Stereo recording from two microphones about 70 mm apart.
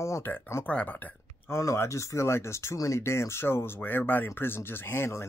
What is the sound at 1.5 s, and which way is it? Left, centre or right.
Speech, left.